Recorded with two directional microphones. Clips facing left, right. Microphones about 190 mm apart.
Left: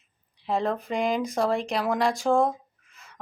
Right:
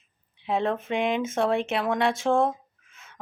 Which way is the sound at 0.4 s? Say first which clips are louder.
Right 1 dB; centre (ahead or behind).